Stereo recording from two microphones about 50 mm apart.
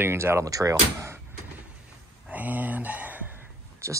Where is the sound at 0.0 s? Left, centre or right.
Right.